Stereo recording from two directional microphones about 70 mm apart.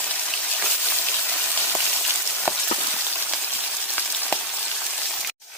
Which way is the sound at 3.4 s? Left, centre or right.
Left.